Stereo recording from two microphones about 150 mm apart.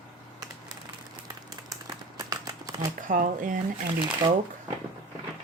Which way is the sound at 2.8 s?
60° right (ahead or behind).